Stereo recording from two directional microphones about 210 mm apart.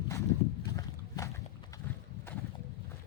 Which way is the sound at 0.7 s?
15° left (ahead or behind).